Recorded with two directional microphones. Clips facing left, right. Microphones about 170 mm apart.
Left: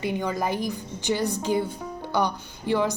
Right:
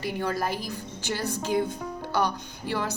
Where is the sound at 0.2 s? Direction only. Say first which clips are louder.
Left 2 dB; 15° left (ahead or behind).